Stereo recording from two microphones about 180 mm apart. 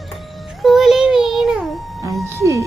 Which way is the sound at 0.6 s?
Centre (ahead or behind).